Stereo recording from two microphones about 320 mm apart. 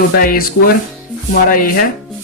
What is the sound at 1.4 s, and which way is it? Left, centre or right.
Speech, left.